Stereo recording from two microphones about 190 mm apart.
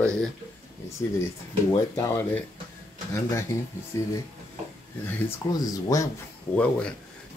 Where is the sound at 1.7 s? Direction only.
15° left (ahead or behind).